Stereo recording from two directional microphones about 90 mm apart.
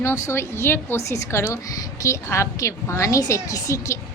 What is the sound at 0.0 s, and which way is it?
A woman's voice, 30° left (ahead or behind).